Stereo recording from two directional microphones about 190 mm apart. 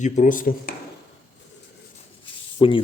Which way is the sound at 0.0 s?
45° left (ahead or behind).